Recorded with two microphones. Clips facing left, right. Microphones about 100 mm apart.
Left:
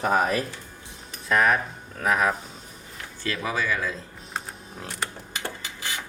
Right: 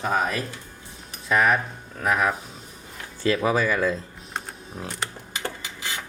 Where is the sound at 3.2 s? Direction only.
45° right (ahead or behind).